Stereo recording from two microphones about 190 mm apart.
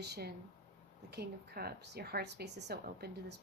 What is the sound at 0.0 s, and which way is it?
A woman's voice, 60° right (ahead or behind).